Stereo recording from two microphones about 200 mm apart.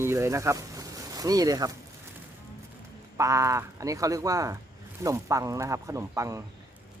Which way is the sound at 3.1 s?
15° right (ahead or behind).